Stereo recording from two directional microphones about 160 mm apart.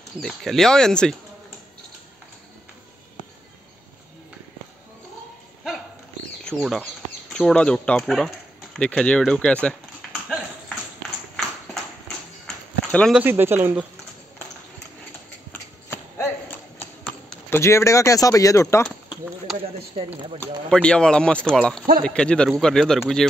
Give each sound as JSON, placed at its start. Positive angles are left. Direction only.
{"t": 0.2, "sound": "speech", "side_deg": 0}
{"t": 6.4, "sound": "speech", "side_deg": 0}
{"t": 11.0, "sound": "clip-clop", "side_deg": 0}
{"t": 12.4, "sound": "a sound", "side_deg": 5}
{"t": 13.2, "sound": "speech", "side_deg": -15}
{"t": 15.5, "sound": "a sound", "side_deg": 15}
{"t": 20.3, "sound": "speech", "side_deg": 5}